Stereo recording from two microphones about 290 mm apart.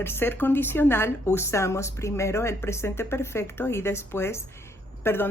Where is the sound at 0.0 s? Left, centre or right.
Centre.